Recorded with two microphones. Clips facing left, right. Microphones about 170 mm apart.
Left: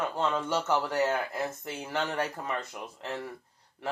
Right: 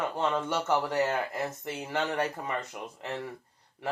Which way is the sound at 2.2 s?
Centre (ahead or behind).